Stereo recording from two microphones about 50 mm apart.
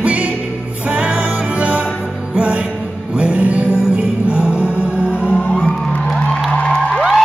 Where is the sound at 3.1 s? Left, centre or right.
Right.